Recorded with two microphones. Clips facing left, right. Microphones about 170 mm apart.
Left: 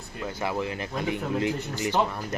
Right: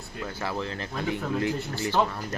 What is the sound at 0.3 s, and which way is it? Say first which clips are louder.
Speech: left 3 dB; 15° left (ahead or behind).